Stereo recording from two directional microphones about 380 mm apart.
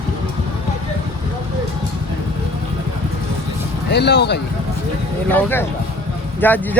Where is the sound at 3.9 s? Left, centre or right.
Left.